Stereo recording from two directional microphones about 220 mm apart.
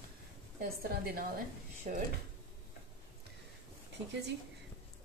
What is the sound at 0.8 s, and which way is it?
Speech, 45° right (ahead or behind).